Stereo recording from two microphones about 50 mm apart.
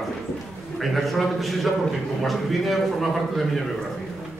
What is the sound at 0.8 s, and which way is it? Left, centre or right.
A man's voice, centre.